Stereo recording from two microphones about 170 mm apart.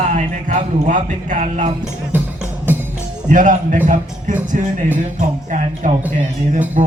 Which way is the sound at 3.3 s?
50° right (ahead or behind).